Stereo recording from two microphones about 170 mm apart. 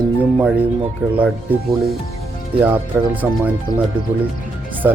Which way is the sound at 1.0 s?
10° right (ahead or behind).